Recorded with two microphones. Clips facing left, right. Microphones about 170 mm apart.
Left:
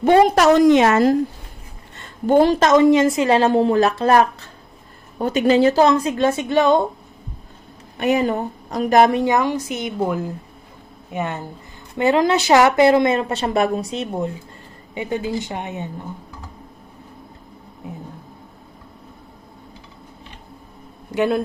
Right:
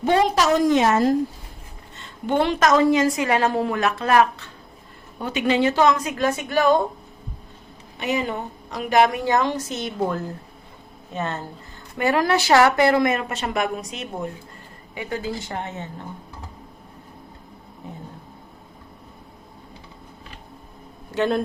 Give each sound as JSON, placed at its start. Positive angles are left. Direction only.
{"t": 0.0, "sound": "a woman's voice", "side_deg": 55}
{"t": 2.0, "sound": "a sound", "side_deg": 40}
{"t": 2.6, "sound": "a woman's voice", "side_deg": 25}
{"t": 7.9, "sound": "a woman's voice", "side_deg": 50}
{"t": 9.1, "sound": "a woman's voice", "side_deg": 15}
{"t": 21.1, "sound": "a man's voice", "side_deg": 10}